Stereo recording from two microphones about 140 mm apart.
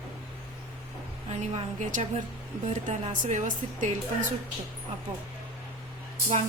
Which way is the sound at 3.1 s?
65° right (ahead or behind).